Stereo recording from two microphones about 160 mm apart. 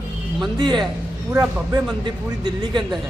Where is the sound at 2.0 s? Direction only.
30° right (ahead or behind).